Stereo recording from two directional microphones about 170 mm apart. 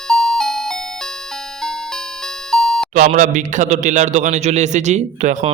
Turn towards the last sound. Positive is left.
turn(degrees=-40)  # may be behind; listen again after turning